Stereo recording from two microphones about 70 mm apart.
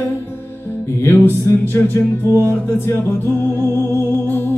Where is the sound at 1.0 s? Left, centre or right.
Left.